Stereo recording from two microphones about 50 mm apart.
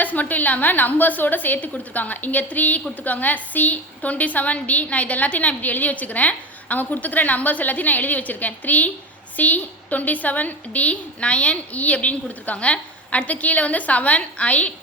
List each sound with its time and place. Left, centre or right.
0.0 s a woman's voice: left